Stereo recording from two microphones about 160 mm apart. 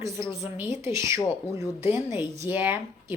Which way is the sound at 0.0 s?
20° right (ahead or behind).